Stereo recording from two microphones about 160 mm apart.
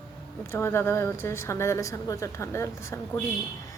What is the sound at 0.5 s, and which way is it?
A woman's voice, 15° left (ahead or behind).